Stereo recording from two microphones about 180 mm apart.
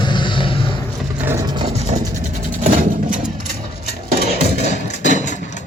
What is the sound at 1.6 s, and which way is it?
Vehicle, 35° right (ahead or behind).